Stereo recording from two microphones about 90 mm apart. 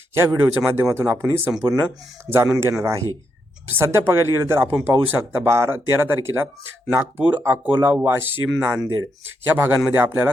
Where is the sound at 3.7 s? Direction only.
30° right (ahead or behind).